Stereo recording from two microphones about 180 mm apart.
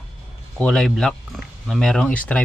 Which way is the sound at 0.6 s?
5° left (ahead or behind).